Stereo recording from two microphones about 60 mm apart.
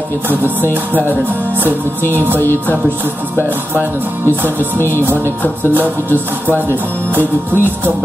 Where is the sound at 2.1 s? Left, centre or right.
Right.